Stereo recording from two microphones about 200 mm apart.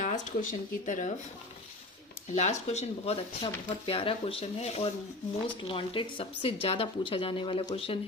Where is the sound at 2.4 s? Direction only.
35° left (ahead or behind).